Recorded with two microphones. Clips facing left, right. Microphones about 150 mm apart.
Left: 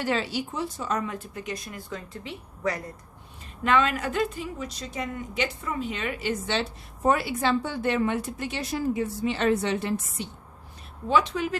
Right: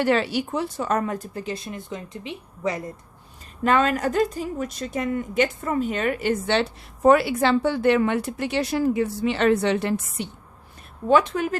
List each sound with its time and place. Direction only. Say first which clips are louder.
0.0 s speech: right 6 dB; 60° right (ahead or behind); by 2.8 s 20° right (ahead or behind)
3.6 s a woman's voice: right 3 dB; 40° right (ahead or behind); by 10.2 s 70° right (ahead or behind)
11.1 s speech: right 5 dB; 50° right (ahead or behind)